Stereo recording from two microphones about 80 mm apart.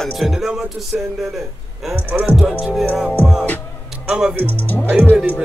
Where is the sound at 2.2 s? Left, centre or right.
Centre.